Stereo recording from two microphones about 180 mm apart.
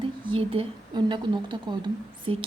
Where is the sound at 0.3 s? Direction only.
30° right (ahead or behind).